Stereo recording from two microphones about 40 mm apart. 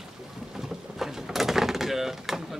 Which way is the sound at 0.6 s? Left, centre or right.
Centre.